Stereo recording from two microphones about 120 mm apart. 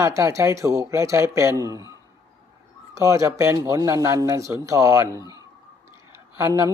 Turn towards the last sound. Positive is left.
turn(degrees=-25)  # may be behind; listen again after turning